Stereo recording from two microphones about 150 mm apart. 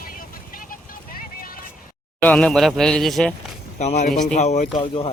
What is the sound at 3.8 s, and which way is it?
Speech, 50° left (ahead or behind).